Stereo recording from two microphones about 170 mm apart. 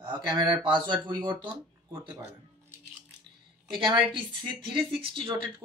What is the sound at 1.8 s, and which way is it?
Speech, 15° right (ahead or behind).